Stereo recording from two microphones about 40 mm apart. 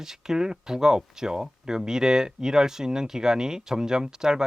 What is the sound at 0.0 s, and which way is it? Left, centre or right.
Speech, centre.